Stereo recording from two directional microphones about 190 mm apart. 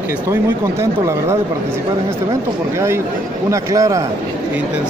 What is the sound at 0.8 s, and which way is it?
Speech, 15° right (ahead or behind).